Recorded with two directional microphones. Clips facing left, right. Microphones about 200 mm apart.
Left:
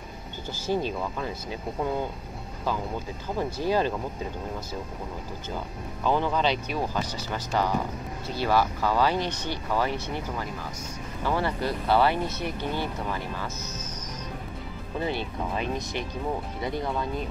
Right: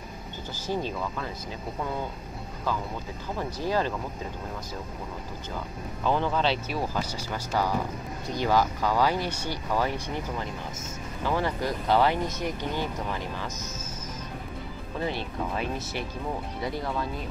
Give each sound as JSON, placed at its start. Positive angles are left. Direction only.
{"t": 0.7, "sound": "speech", "side_deg": 15}
{"t": 3.3, "sound": "speech", "side_deg": 20}
{"t": 6.0, "sound": "speech", "side_deg": 5}
{"t": 6.7, "sound": "speech", "side_deg": -10}
{"t": 11.2, "sound": "speech", "side_deg": -15}
{"t": 15.0, "sound": "speech", "side_deg": 0}